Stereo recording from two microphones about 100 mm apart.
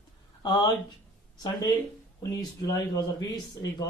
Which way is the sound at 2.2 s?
35° left (ahead or behind).